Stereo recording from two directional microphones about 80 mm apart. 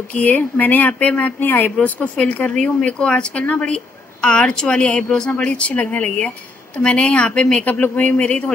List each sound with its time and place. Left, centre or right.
0.1 s speech: centre
7.6 s speech: left